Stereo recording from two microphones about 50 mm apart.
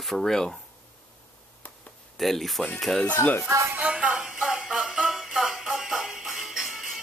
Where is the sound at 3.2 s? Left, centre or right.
Left.